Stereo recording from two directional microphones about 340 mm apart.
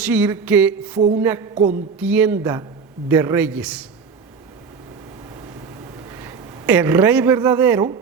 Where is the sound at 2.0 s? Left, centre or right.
Centre.